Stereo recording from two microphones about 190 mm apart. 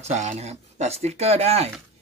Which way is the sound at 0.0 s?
35° right (ahead or behind).